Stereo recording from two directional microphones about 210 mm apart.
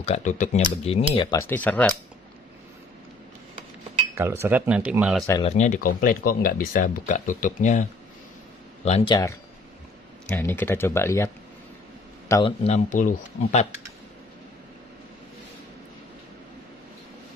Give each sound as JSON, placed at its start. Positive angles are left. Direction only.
{"t": 0.0, "sound": "speech", "side_deg": 35}
{"t": 1.1, "sound": "speech", "side_deg": 20}
{"t": 4.1, "sound": "speech", "side_deg": -10}
{"t": 5.4, "sound": "speech", "side_deg": 35}
{"t": 8.8, "sound": "speech", "side_deg": 25}
{"t": 12.3, "sound": "a man's voice", "side_deg": 20}
{"t": 12.6, "sound": "speech", "side_deg": 35}